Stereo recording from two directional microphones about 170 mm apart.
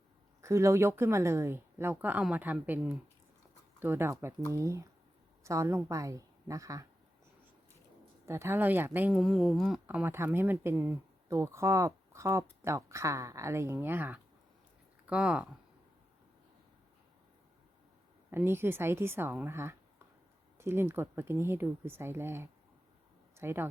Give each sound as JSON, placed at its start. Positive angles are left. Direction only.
{"t": 0.4, "sound": "a woman's voice", "side_deg": -15}
{"t": 8.3, "sound": "speech", "side_deg": -15}
{"t": 9.8, "sound": "speech", "side_deg": -10}
{"t": 18.3, "sound": "speech", "side_deg": -15}